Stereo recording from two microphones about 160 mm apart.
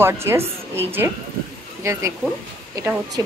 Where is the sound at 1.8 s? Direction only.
20° right (ahead or behind).